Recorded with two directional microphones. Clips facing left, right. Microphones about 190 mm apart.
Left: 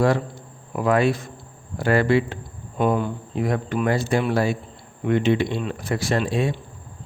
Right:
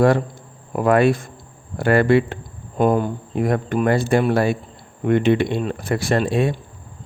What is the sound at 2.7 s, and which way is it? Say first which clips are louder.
Speech: right 4 dB; 40° right (ahead or behind).